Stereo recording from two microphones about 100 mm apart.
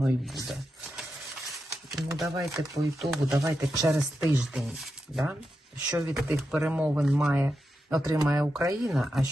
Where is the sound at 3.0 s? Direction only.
5° right (ahead or behind).